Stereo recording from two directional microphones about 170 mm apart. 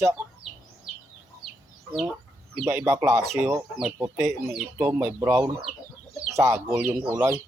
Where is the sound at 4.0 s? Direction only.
15° right (ahead or behind).